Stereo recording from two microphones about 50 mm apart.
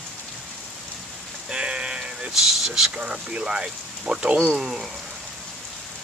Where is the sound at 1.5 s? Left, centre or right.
Centre.